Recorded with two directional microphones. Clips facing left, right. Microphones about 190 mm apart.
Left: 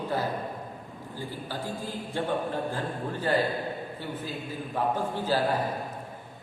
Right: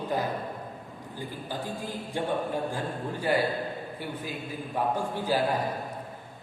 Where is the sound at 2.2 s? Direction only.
15° right (ahead or behind).